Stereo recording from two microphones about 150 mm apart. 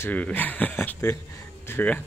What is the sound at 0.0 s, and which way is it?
Speech, 10° left (ahead or behind).